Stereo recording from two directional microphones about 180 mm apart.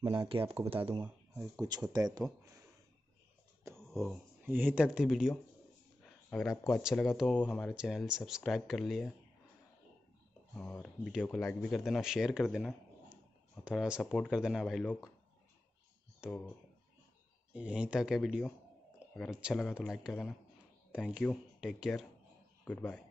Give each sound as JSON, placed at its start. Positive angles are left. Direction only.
{"t": 0.3, "sound": "speech", "side_deg": -30}
{"t": 1.4, "sound": "speech", "side_deg": -20}
{"t": 3.7, "sound": "speech", "side_deg": 0}
{"t": 6.6, "sound": "speech", "side_deg": 0}
{"t": 10.5, "sound": "speech", "side_deg": 5}
{"t": 16.2, "sound": "speech", "side_deg": -5}
{"t": 17.6, "sound": "speech", "side_deg": -5}
{"t": 22.7, "sound": "speech", "side_deg": 10}